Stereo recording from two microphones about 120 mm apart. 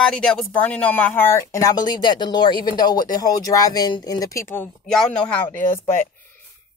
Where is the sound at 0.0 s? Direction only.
5° left (ahead or behind); by 4.6 s 20° left (ahead or behind).